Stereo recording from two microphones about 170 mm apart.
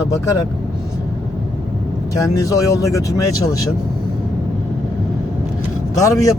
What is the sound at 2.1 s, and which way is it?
Speech, 20° left (ahead or behind).